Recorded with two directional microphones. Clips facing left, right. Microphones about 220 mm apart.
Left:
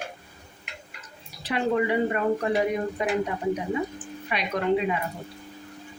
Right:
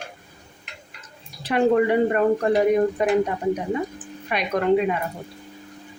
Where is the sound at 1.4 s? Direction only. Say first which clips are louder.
Right 6 dB; 50° right (ahead or behind).